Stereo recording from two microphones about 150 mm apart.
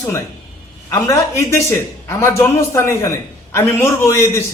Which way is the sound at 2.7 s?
20° left (ahead or behind).